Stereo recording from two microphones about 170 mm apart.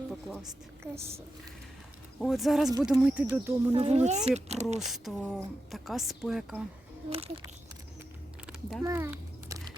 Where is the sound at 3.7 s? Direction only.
35° right (ahead or behind).